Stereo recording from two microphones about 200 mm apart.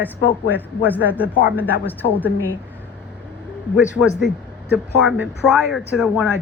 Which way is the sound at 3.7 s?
5° right (ahead or behind).